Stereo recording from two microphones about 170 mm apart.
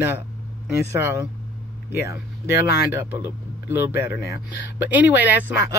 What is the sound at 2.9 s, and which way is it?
Speech, 15° right (ahead or behind).